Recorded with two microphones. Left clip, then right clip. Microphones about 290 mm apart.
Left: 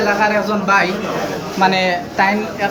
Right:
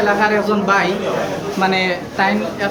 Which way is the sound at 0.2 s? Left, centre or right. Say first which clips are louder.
Even; centre.